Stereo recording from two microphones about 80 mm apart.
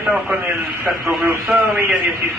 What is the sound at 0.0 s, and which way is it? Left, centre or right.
Speech, right.